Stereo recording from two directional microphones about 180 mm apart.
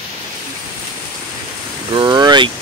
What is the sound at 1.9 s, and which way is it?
Speech, 25° right (ahead or behind).